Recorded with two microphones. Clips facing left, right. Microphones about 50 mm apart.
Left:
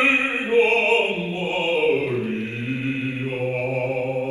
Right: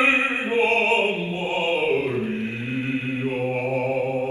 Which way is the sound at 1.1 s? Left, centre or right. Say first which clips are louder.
Left 1 dB; centre.